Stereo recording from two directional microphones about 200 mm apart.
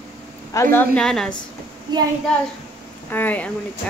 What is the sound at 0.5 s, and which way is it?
Speech, 10° left (ahead or behind).